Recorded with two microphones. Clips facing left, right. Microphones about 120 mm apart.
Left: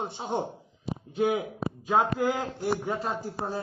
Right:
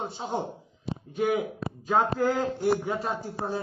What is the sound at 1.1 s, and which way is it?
Speech, 20° left (ahead or behind).